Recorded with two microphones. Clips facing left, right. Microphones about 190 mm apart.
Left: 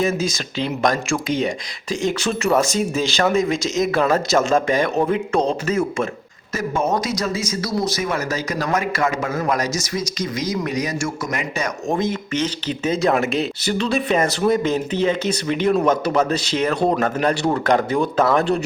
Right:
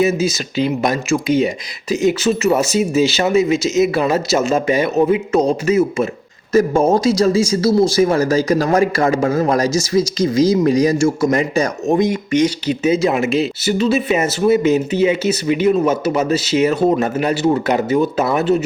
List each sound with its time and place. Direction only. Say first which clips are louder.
0.0 s speech: right 5 dB; 5° right (ahead or behind)
6.5 s speech: right 8 dB; 35° right (ahead or behind)
11.9 s speech: right 4 dB; 15° right (ahead or behind)